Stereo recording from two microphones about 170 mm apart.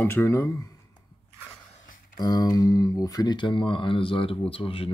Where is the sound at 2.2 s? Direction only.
25° left (ahead or behind).